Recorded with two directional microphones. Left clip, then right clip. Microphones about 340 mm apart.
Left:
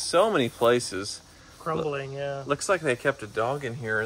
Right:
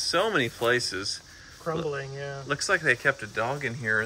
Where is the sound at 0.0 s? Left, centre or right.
Centre.